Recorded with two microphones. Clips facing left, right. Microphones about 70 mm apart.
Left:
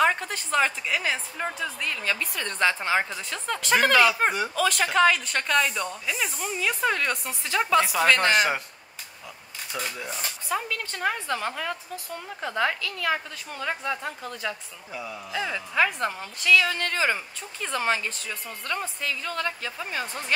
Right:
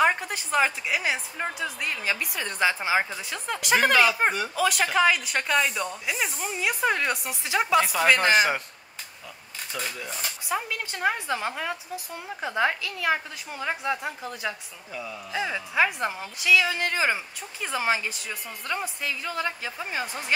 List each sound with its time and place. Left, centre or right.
0.0 s speech: centre
7.8 s speech: centre
9.7 s speech: left
10.5 s speech: centre
14.9 s a man's voice: centre
15.3 s speech: centre